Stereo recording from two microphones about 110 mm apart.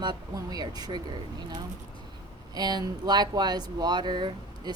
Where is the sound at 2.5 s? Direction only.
40° right (ahead or behind).